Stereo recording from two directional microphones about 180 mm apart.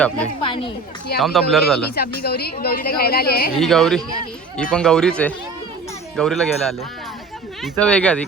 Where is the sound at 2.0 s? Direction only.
60° left (ahead or behind).